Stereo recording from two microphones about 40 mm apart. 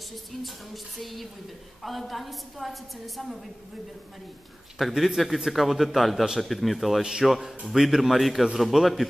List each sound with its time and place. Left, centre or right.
0.9 s a woman's voice: centre
4.7 s a woman's voice: centre
7.0 s a man's voice: centre
7.2 s a woman's voice: centre